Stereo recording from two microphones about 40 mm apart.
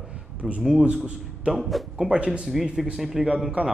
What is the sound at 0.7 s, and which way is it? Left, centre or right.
Speech, right.